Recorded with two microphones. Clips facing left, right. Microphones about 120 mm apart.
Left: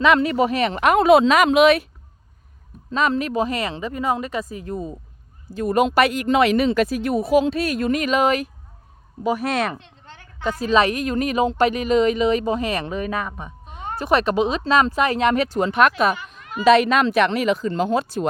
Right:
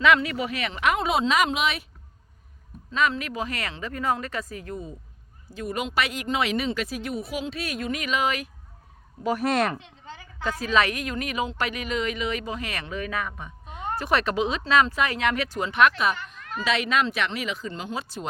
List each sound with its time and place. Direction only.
0.0 s speech: 30° left (ahead or behind)
0.9 s a woman's voice: 65° left (ahead or behind)
2.9 s speech: 35° left (ahead or behind)
5.5 s a woman's voice: 50° left (ahead or behind)
9.2 s speech: 5° left (ahead or behind)
10.6 s speech: 25° left (ahead or behind)
13.7 s a sound: centre (ahead or behind)
14.0 s speech: 20° left (ahead or behind); by 15.9 s 40° left (ahead or behind)
16.1 s a sound: 10° left (ahead or behind)
16.6 s speech: 45° left (ahead or behind)